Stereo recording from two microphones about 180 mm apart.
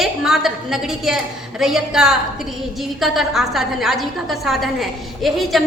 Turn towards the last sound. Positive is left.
turn(degrees=0)  # may be behind; listen again after turning